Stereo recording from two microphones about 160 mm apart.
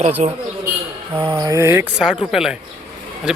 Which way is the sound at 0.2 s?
45° right (ahead or behind).